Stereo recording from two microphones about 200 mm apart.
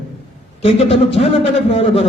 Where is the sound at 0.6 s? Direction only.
30° left (ahead or behind).